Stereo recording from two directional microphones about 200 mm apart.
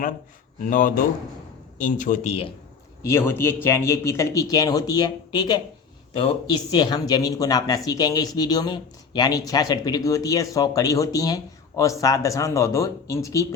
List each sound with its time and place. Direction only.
0.7 s speech: 40° left (ahead or behind)
3.0 s speech: 15° left (ahead or behind)